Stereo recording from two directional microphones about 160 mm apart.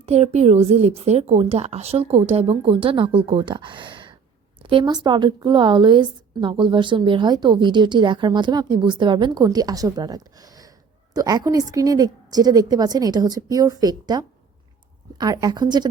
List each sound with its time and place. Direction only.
0.0 s a woman's voice: 40° right (ahead or behind)